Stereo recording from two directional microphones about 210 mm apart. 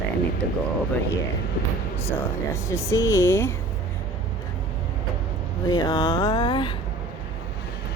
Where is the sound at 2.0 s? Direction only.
10° left (ahead or behind).